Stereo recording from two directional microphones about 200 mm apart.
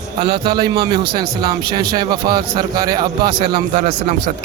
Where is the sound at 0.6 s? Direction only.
20° right (ahead or behind).